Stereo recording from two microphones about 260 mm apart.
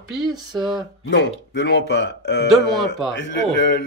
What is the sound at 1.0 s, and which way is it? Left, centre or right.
Speech, left.